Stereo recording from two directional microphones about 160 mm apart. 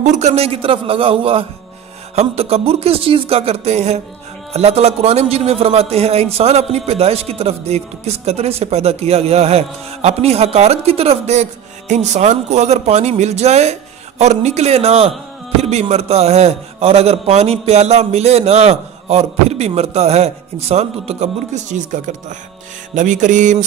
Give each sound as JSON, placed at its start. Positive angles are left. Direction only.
{"t": 0.0, "sound": "a man's voice", "side_deg": -45}